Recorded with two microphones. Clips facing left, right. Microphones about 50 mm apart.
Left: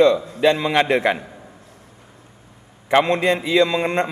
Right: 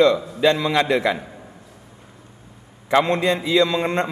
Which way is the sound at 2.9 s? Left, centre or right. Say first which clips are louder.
Left 1 dB; left.